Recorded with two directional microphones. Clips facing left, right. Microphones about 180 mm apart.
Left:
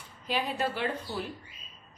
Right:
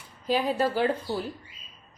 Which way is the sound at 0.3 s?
40° right (ahead or behind).